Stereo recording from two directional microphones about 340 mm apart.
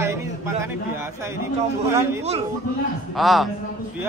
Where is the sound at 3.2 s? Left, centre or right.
Centre.